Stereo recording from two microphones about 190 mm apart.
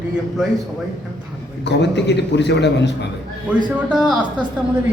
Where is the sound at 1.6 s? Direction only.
65° left (ahead or behind).